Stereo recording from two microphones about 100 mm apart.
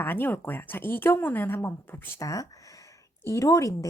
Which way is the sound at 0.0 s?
20° left (ahead or behind).